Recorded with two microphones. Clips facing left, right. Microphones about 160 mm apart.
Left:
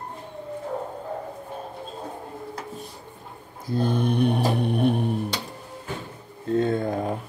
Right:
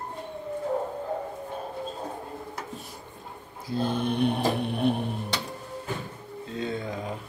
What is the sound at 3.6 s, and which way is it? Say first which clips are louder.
Mantra: left 3 dB; 50° left (ahead or behind).